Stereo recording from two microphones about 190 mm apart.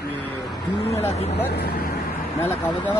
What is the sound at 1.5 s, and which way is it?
Speech, 55° left (ahead or behind).